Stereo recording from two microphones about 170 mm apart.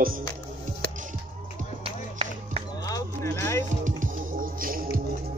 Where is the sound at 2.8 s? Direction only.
20° left (ahead or behind).